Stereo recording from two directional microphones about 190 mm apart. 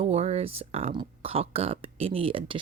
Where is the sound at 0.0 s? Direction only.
35° right (ahead or behind).